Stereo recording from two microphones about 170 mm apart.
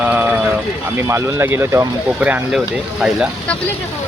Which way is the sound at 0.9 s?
15° right (ahead or behind).